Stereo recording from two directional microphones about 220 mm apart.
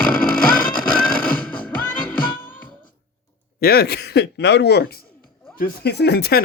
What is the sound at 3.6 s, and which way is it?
Speech, 45° left (ahead or behind).